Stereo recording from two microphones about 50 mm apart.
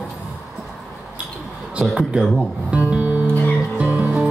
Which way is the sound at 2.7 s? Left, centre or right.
Right.